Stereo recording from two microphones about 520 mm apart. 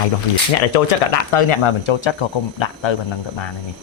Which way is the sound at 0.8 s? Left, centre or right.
Left.